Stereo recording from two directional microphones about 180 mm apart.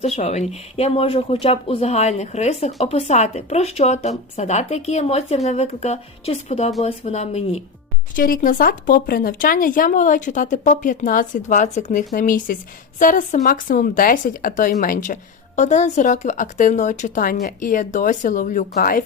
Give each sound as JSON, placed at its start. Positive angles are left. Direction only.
{"t": 0.2, "sound": "speech", "side_deg": 35}
{"t": 8.1, "sound": "speech", "side_deg": 50}